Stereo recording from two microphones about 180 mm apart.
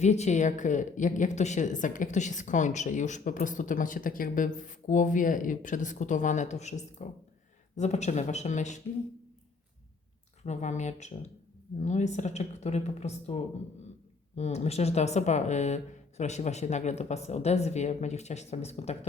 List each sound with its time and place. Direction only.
0.0 s a woman's voice: 40° left (ahead or behind)
10.4 s speech: 40° left (ahead or behind)